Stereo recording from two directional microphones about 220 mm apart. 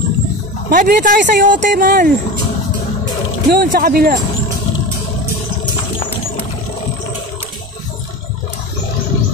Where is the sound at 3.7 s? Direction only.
40° right (ahead or behind).